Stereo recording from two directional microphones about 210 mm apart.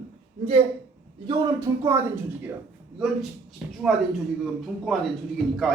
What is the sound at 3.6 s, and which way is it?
Speech, 5° right (ahead or behind).